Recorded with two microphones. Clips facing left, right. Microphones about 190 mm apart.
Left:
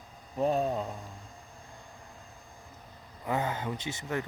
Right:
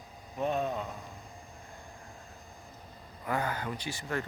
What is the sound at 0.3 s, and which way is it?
Speech, 35° left (ahead or behind).